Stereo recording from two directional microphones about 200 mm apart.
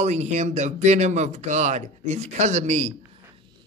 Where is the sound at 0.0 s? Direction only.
35° right (ahead or behind).